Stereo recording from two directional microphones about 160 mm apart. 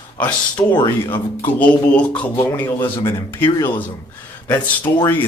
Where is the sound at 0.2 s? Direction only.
10° left (ahead or behind).